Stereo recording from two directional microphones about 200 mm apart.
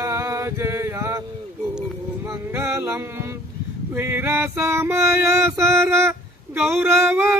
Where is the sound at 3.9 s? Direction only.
10° right (ahead or behind).